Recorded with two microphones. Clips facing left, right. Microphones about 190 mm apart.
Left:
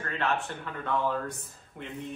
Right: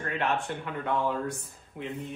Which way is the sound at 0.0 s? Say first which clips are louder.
Right 1 dB; 15° right (ahead or behind).